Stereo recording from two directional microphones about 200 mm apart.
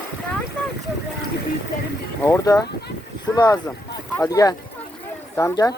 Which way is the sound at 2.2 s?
15° left (ahead or behind).